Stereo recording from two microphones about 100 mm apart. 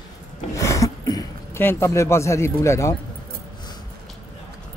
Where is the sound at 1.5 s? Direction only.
25° left (ahead or behind).